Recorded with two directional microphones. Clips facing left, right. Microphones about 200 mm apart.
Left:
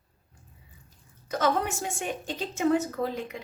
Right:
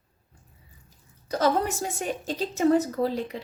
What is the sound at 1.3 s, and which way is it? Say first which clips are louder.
A woman's voice: right 3 dB; 35° right (ahead or behind).